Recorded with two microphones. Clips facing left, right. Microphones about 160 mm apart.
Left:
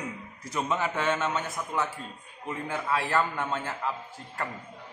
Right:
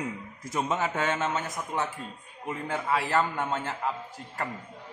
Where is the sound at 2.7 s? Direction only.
15° right (ahead or behind).